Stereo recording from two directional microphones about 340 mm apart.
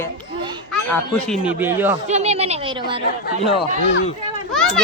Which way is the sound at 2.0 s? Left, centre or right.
Centre.